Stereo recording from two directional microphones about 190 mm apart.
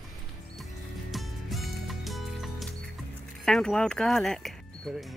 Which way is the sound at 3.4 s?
5° left (ahead or behind).